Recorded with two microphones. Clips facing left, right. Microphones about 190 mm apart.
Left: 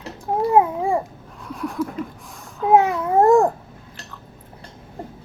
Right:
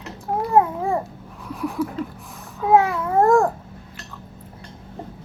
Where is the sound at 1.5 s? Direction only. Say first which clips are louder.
Right 1 dB; centre (ahead or behind).